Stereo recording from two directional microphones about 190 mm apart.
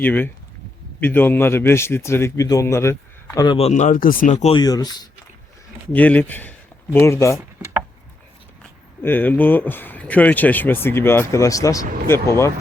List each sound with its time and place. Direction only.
0.0 s a man's voice: 10° left (ahead or behind); by 4.5 s 40° left (ahead or behind)
4.5 s speech: 20° left (ahead or behind)
5.9 s a man's voice: 10° left (ahead or behind)
9.0 s a man's voice: 10° left (ahead or behind)